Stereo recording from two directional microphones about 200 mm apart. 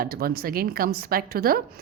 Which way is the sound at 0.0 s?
50° right (ahead or behind).